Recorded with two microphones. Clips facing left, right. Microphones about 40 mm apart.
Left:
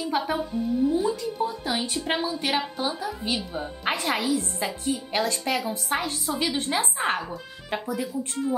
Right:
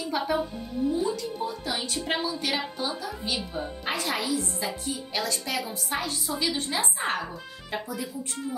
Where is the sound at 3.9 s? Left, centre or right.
Left.